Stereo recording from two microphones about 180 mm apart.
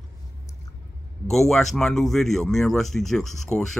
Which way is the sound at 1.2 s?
Centre (ahead or behind).